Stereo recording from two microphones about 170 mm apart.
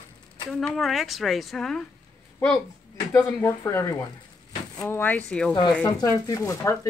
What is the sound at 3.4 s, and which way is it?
Speech, 15° left (ahead or behind).